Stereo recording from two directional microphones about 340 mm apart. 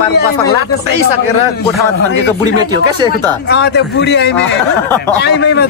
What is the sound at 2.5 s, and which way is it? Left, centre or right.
Speech, centre.